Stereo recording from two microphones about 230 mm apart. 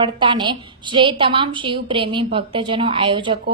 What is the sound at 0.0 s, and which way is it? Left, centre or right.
A woman's voice, right.